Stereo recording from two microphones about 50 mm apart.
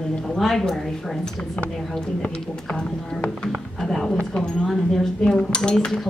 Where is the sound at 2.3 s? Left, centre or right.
Left.